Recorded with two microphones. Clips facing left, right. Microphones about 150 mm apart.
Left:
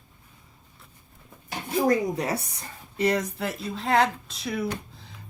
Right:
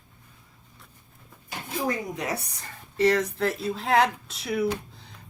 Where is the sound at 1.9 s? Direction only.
35° left (ahead or behind).